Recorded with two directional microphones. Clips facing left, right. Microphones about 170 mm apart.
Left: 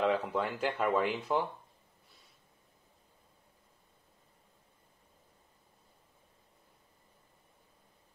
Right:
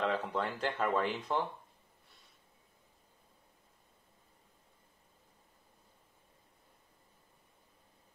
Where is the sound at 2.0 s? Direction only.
Centre (ahead or behind).